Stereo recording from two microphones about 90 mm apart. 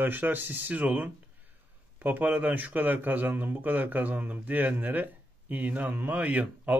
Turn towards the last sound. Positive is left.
turn(degrees=-15)  # may be behind; listen again after turning